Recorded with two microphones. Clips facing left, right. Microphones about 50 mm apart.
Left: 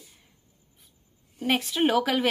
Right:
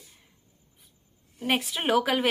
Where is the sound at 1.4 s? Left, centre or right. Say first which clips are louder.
Left 3 dB; centre.